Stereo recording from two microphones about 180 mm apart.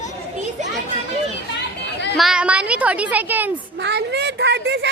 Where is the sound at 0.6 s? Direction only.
40° right (ahead or behind).